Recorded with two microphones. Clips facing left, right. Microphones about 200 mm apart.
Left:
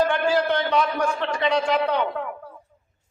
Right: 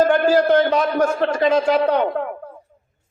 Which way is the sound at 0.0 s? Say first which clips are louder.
Right 6 dB; 45° right (ahead or behind).